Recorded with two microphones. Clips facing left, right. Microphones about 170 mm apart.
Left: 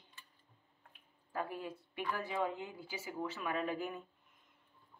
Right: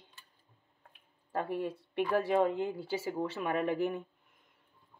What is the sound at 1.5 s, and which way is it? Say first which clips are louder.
Speech: right 9 dB; 60° right (ahead or behind).